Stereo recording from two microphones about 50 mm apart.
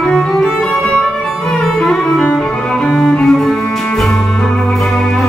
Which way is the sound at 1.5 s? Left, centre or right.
Centre.